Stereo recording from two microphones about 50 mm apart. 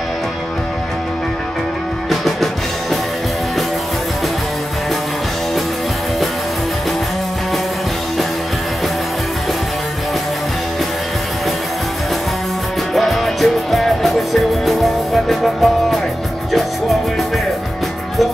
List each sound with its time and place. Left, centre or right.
2.0 s music: centre
12.9 s music: centre